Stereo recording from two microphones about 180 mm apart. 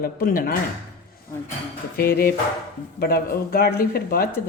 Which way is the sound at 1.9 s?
55° left (ahead or behind).